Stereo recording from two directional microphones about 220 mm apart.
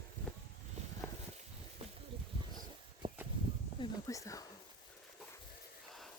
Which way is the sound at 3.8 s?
15° left (ahead or behind).